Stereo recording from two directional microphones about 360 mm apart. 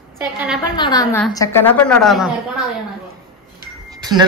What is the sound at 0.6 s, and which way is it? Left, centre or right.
A woman's voice, centre.